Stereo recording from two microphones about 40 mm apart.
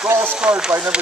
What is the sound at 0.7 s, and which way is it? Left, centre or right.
Speech, right.